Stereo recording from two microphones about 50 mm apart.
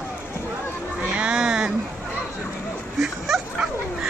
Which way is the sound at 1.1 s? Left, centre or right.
Centre.